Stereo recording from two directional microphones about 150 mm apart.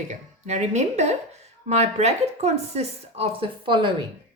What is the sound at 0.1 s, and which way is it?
A woman's voice, 50° right (ahead or behind).